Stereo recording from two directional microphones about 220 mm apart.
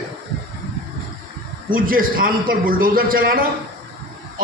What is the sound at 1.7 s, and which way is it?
A man's voice, 40° right (ahead or behind).